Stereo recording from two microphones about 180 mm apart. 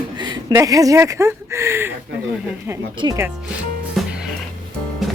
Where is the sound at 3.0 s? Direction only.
20° right (ahead or behind).